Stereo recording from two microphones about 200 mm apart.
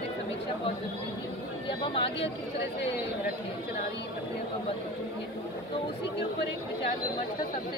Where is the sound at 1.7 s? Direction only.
25° left (ahead or behind).